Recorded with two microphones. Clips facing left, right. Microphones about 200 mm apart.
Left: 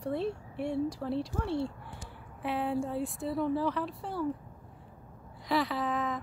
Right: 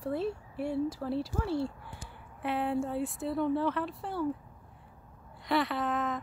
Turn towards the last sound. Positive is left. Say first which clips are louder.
# even
turn(degrees=0)  # may be behind; listen again after turning